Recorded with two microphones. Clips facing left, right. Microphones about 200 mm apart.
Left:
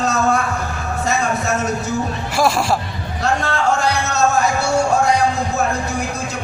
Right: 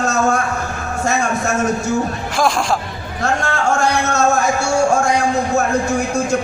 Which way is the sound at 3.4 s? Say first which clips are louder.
Right 2 dB; 50° right (ahead or behind).